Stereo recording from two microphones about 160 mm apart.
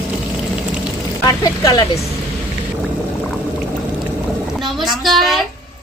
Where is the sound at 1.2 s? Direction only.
25° left (ahead or behind).